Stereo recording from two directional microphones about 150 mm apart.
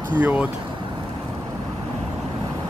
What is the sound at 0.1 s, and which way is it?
Speech, 10° right (ahead or behind).